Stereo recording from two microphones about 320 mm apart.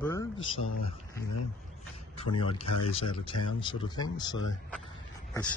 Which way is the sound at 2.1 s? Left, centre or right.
Centre.